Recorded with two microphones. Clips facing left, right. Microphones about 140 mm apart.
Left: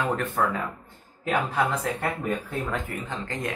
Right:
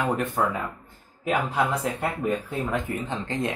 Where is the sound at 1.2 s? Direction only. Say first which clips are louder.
Right 1 dB; 15° right (ahead or behind).